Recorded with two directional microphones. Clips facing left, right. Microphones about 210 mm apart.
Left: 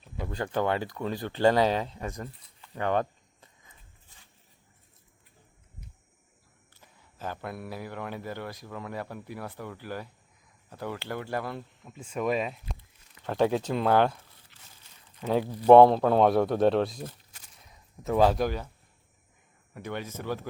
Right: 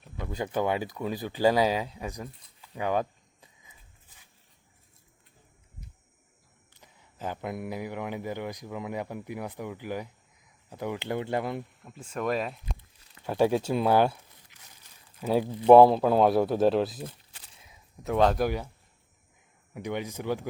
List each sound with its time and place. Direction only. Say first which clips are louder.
0.3 s speech: even; 10° right (ahead or behind)
6.7 s speech: right 2 dB; 15° right (ahead or behind)
11.8 s speech: left 1 dB; 5° right (ahead or behind)
13.2 s speech: right 1 dB; 10° right (ahead or behind)
15.6 s speech: even; 5° right (ahead or behind)
18.4 s speech: right 1 dB; 10° right (ahead or behind)
19.7 s speech: right 3 dB; 15° right (ahead or behind)